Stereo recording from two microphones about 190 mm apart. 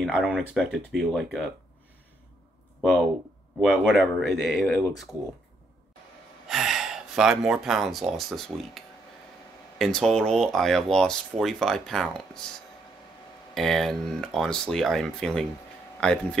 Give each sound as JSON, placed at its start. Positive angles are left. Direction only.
{"t": 0.0, "sound": "speech", "side_deg": -5}
{"t": 2.8, "sound": "speech", "side_deg": 0}
{"t": 6.4, "sound": "speech", "side_deg": 0}
{"t": 13.6, "sound": "speech", "side_deg": 0}